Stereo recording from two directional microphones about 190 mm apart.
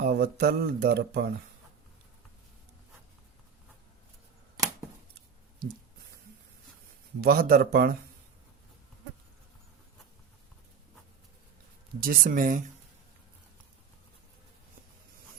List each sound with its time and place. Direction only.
0.0 s speech: 55° right (ahead or behind)
7.2 s speech: 50° right (ahead or behind)
11.9 s speech: 50° right (ahead or behind)